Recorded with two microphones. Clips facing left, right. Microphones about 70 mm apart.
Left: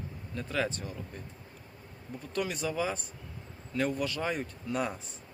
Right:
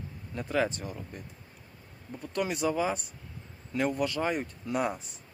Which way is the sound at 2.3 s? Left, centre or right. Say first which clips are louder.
Right 4 dB; centre.